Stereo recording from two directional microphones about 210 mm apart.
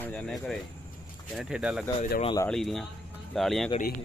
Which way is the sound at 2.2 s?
20° left (ahead or behind).